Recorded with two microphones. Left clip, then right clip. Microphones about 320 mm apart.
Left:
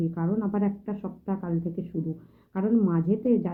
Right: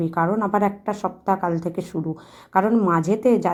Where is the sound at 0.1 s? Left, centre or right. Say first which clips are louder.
Right 10 dB; centre.